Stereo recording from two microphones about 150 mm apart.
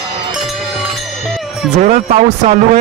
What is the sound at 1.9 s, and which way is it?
Speech, 50° right (ahead or behind).